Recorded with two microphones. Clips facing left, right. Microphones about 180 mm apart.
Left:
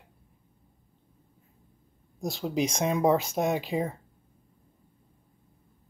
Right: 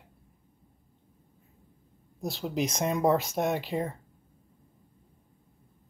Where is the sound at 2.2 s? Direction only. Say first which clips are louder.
Left 2 dB; centre (ahead or behind).